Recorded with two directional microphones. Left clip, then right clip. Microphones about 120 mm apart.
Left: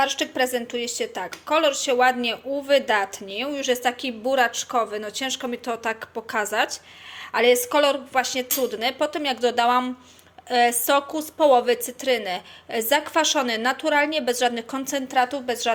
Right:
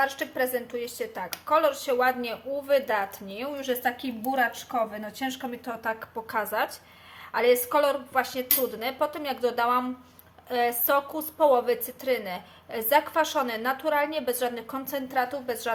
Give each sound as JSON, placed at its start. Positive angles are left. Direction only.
{"t": 0.0, "sound": "a woman's voice", "side_deg": 25}
{"t": 3.7, "sound": "a woman's voice", "side_deg": 50}
{"t": 6.2, "sound": "a woman's voice", "side_deg": 15}